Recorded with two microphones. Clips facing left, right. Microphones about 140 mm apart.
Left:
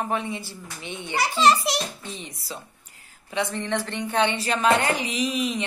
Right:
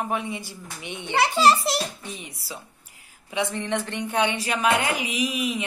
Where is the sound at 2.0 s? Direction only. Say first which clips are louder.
Left 1 dB; 10° right (ahead or behind).